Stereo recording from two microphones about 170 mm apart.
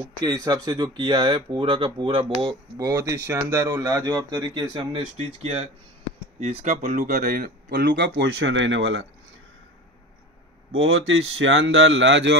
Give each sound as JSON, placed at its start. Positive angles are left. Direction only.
{"t": 0.2, "sound": "speech", "side_deg": -20}
{"t": 6.7, "sound": "speech", "side_deg": -50}
{"t": 11.0, "sound": "speech", "side_deg": -90}